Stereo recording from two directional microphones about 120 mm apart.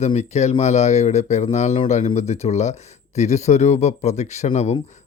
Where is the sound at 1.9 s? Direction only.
80° left.